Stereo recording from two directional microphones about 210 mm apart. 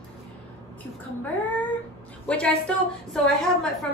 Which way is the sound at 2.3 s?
5° left (ahead or behind).